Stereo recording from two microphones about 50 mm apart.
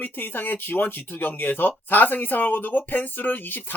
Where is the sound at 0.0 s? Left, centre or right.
Left.